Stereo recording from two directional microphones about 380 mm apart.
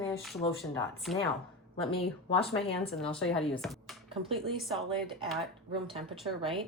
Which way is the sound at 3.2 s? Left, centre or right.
Centre.